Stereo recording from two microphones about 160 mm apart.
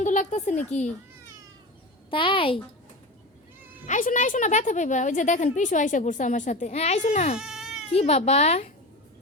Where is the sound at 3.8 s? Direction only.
50° left (ahead or behind).